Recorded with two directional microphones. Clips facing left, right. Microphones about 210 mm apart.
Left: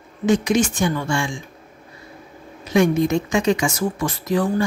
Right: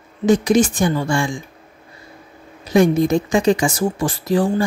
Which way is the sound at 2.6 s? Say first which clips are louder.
Right 3 dB; 35° right (ahead or behind).